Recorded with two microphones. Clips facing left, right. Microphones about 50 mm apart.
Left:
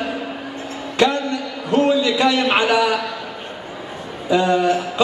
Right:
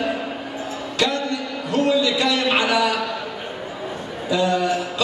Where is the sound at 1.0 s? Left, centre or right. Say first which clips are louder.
Left 5 dB; left.